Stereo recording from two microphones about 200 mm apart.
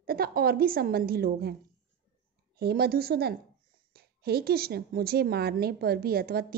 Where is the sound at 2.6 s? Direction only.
50° right (ahead or behind).